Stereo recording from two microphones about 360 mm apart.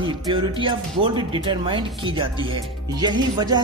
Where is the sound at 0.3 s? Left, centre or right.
Centre.